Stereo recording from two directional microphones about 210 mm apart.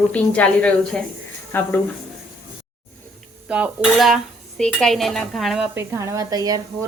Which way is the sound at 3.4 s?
5° right (ahead or behind).